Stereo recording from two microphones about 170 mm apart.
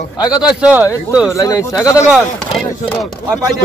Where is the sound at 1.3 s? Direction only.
20° left (ahead or behind).